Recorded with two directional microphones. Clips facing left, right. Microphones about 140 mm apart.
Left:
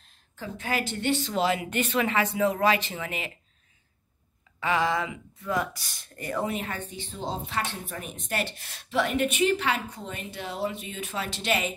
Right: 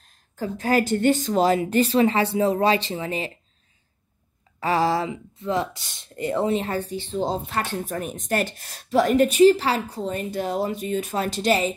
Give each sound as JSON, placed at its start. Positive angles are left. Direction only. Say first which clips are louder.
{"t": 0.0, "sound": "speech", "louder": "right 9 dB", "side_deg": -40}
{"t": 4.6, "sound": "speech", "louder": "right 4 dB", "side_deg": -35}
{"t": 7.4, "sound": "speech", "louder": "right 5 dB", "side_deg": -45}